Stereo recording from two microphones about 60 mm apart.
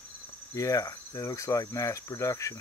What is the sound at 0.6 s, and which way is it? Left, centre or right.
Speech, left.